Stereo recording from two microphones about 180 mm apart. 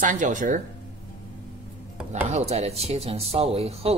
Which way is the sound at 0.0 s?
45° right (ahead or behind).